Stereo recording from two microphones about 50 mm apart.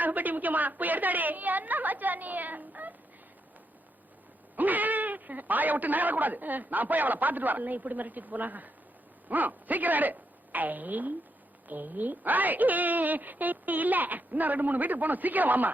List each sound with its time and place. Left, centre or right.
0.0 s speech: right
4.5 s speech: right